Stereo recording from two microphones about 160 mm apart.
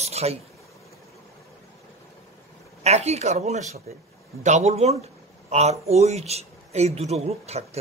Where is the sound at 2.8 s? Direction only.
40° right (ahead or behind).